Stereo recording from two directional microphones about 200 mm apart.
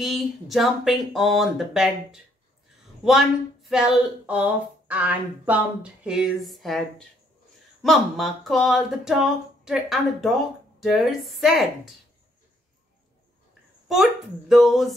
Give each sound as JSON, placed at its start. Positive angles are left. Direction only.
{"t": 0.0, "sound": "speech", "side_deg": 0}
{"t": 13.8, "sound": "speech", "side_deg": 0}